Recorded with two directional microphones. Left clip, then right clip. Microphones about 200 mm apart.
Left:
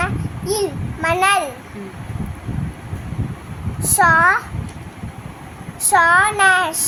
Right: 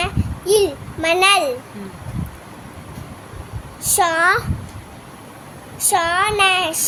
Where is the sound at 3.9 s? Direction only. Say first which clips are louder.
Left 3 dB; 35° right (ahead or behind).